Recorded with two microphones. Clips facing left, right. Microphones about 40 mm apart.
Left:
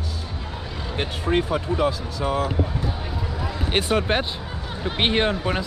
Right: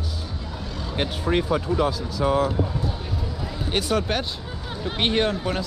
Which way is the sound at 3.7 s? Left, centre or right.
Left.